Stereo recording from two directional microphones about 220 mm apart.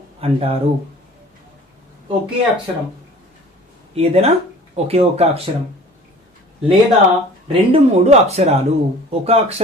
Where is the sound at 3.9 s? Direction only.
30° right (ahead or behind).